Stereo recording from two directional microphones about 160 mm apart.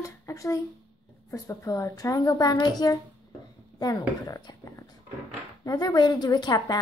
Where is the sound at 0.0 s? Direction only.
20° left (ahead or behind).